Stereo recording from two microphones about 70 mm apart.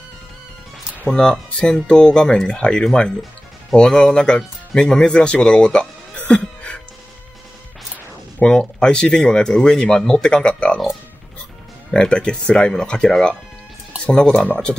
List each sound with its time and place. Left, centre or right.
1.0 s speech: centre
8.4 s speech: centre
11.9 s speech: centre